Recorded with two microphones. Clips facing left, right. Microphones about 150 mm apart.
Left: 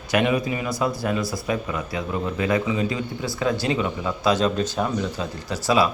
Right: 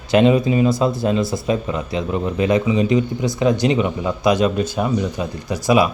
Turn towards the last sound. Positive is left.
turn(degrees=-15)  # may be behind; listen again after turning